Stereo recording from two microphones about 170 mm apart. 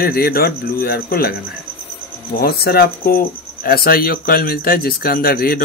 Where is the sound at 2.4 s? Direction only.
65° left (ahead or behind).